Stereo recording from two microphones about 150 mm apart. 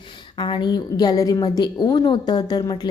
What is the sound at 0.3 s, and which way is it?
A woman's voice, 30° left (ahead or behind).